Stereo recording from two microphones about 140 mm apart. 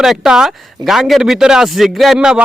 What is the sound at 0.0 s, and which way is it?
Speech, centre (ahead or behind).